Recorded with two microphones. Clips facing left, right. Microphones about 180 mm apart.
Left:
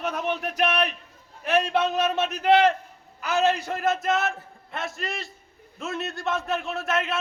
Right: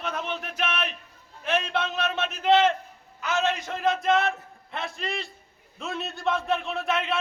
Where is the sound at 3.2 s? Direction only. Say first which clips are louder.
Left 4 dB; 35° left (ahead or behind).